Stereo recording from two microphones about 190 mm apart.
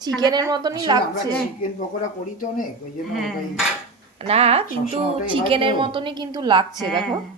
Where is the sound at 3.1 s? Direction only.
Centre (ahead or behind).